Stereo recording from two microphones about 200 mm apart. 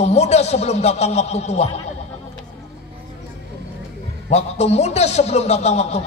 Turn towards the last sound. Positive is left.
turn(degrees=35)  # may be behind; listen again after turning